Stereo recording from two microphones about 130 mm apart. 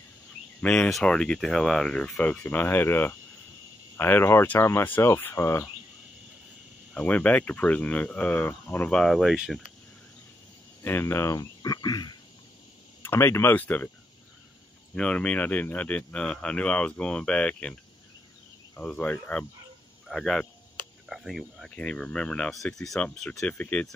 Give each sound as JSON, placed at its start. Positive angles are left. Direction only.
{"t": 0.6, "sound": "speech", "side_deg": 10}
{"t": 6.9, "sound": "speech", "side_deg": 10}
{"t": 10.8, "sound": "speech", "side_deg": 15}
{"t": 13.0, "sound": "speech", "side_deg": 20}
{"t": 15.0, "sound": "speech", "side_deg": 10}
{"t": 18.8, "sound": "speech", "side_deg": 10}